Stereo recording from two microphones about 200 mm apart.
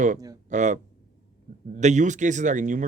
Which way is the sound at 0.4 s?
35° right (ahead or behind).